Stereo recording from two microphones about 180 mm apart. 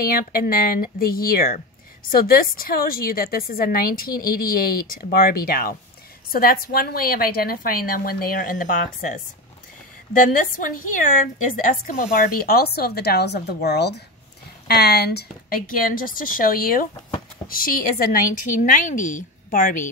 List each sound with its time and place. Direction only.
0.0 s a woman's voice: 55° left (ahead or behind)